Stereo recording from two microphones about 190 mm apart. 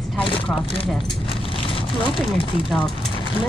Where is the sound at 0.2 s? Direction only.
25° left (ahead or behind).